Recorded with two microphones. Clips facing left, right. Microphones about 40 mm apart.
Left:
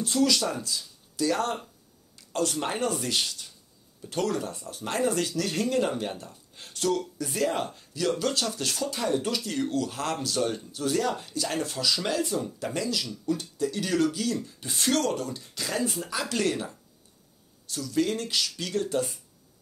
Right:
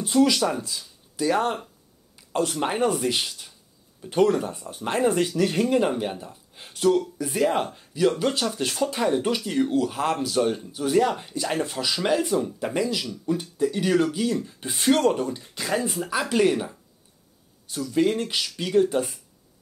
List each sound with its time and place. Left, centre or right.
0.0 s speech: right